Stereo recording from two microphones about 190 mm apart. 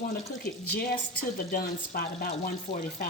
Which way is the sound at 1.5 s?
50° left (ahead or behind).